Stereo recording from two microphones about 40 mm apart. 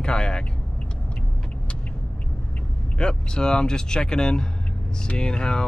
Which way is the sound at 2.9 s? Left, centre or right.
Left.